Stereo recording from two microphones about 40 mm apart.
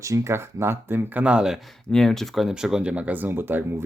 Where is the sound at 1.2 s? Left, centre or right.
Right.